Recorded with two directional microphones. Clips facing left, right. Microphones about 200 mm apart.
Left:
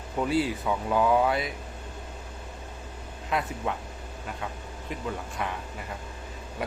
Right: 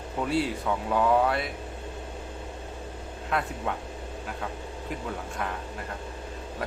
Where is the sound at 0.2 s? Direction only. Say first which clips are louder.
Left 1 dB; centre (ahead or behind).